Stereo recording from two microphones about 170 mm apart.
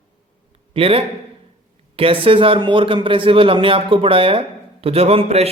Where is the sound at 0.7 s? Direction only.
35° right (ahead or behind).